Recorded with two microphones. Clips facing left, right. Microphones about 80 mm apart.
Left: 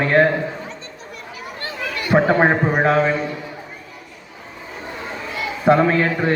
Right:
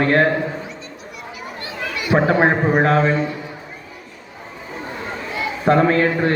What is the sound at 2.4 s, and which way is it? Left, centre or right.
Speech, centre.